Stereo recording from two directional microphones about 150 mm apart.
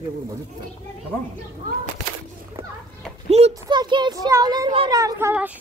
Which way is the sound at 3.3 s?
45° right (ahead or behind).